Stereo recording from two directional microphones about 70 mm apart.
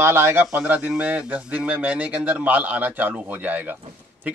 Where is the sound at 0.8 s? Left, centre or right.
Centre.